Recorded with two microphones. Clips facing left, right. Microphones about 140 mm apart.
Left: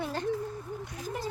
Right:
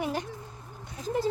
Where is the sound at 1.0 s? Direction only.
25° right (ahead or behind).